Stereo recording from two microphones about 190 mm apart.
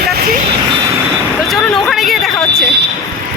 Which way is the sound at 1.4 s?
Centre (ahead or behind).